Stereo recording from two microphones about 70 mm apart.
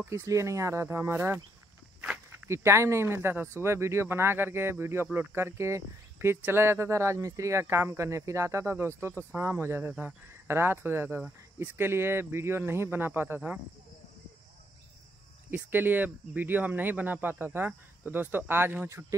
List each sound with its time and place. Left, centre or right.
0.0 s speech: right
0.8 s speech: right
2.4 s speech: right
15.5 s speech: right
18.9 s speech: right